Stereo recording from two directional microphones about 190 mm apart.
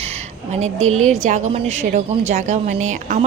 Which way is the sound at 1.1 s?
40° right (ahead or behind).